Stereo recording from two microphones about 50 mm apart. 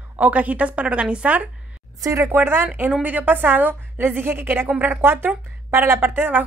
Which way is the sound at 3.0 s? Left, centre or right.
Right.